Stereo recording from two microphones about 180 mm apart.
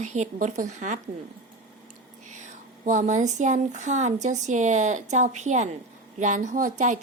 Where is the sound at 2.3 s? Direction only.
40° right (ahead or behind).